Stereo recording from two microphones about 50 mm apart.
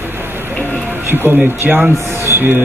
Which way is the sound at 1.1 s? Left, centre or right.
Right.